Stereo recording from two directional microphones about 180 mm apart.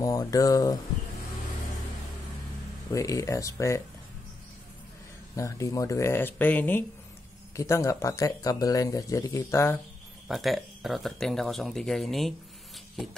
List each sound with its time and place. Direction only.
0.0 s speech: 20° left (ahead or behind)
2.9 s speech: 15° left (ahead or behind)
5.3 s speech: 15° left (ahead or behind)
10.2 s speech: centre (ahead or behind)